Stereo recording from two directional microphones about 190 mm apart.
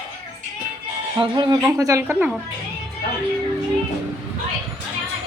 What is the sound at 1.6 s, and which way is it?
Speech, 15° right (ahead or behind).